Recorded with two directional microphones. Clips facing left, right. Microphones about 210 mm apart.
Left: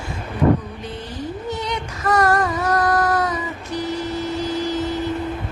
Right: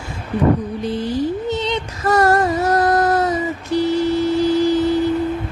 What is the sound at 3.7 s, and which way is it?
Vehicle, 30° right (ahead or behind).